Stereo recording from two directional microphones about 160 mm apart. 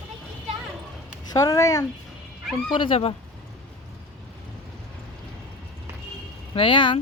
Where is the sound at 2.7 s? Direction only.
35° left (ahead or behind).